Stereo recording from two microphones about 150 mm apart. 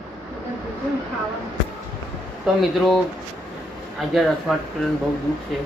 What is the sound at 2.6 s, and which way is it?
Speech, centre (ahead or behind).